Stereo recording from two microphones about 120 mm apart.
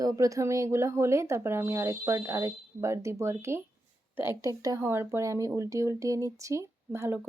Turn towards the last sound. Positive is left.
turn(degrees=-20)  # may be behind; listen again after turning